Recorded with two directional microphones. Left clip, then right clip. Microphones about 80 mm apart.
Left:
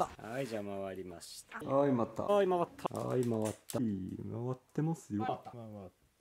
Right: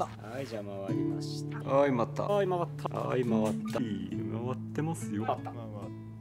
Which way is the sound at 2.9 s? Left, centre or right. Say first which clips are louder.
Right 4 dB; left.